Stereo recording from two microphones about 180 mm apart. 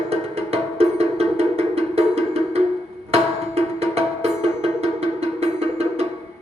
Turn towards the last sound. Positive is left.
turn(degrees=-35)  # may be behind; listen again after turning